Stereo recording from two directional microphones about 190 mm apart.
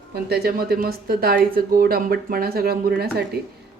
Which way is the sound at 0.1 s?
55° right (ahead or behind).